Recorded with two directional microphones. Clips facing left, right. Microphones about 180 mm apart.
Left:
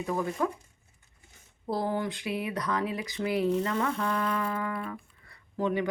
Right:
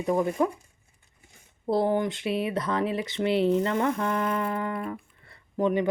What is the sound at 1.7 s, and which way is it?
Speech, 20° right (ahead or behind).